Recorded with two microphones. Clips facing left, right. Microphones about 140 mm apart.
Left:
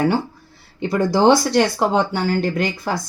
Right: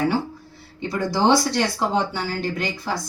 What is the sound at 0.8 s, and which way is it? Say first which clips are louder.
A woman's voice: left 5 dB; 55° left (ahead or behind).